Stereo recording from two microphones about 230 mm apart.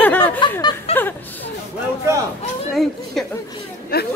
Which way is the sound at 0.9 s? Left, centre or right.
Left.